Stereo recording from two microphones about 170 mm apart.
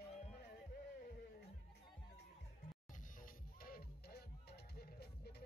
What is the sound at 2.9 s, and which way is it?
Music, 55° left (ahead or behind).